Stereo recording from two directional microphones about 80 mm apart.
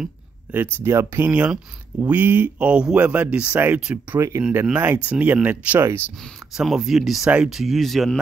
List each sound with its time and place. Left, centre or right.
0.5 s speech: right
5.8 s speech: right
6.5 s speech: centre
7.2 s speech: centre
7.5 s speech: centre